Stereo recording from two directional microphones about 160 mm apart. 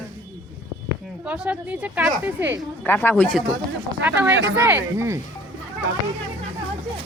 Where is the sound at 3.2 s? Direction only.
Centre (ahead or behind).